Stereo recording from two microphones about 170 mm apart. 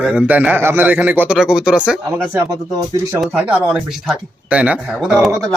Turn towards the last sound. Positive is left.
turn(degrees=0)  # may be behind; listen again after turning